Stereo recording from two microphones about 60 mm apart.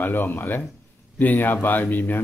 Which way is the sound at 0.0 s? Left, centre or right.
Left.